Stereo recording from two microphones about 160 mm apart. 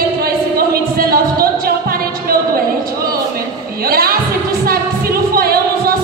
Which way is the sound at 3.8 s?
70° right (ahead or behind).